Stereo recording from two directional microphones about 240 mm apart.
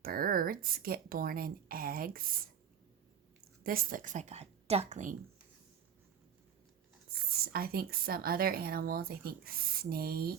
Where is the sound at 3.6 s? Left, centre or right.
Right.